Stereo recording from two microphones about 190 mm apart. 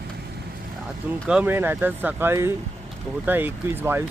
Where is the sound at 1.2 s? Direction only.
5° right (ahead or behind).